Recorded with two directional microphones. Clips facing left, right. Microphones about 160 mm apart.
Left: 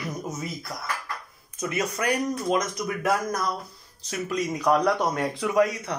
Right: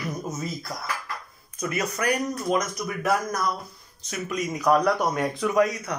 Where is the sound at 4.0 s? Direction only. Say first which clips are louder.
Left 1 dB; 30° left (ahead or behind).